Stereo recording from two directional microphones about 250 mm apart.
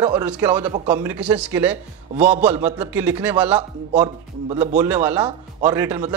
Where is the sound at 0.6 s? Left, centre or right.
Right.